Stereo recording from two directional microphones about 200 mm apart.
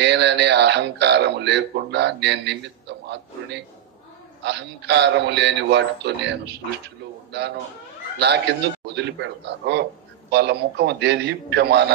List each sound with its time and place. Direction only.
0.0 s speech: 60° right (ahead or behind)
8.2 s speech: 55° right (ahead or behind)